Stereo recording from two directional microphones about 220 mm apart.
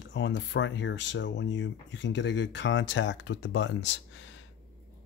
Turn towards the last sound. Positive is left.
turn(degrees=55)  # may be behind; listen again after turning